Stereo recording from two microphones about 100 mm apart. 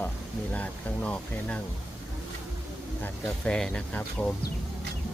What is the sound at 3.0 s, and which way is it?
Speech, 10° left (ahead or behind).